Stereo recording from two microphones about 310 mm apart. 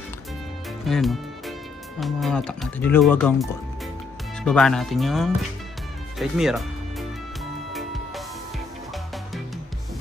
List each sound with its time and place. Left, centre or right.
0.8 s speech: centre
6.1 s music: centre